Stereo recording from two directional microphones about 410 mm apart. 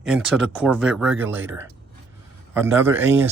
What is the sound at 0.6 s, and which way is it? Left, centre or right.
A man's voice, centre.